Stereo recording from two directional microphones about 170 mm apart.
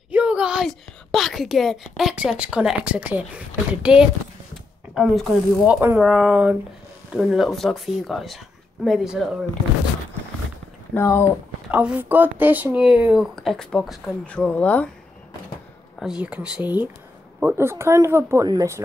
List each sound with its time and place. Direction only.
0.1 s a woman's voice: 5° right (ahead or behind)
11.0 s speech: 15° left (ahead or behind)
11.7 s a woman's voice: 10° right (ahead or behind); by 14.9 s 10° left (ahead or behind)
16.0 s speech: 5° right (ahead or behind)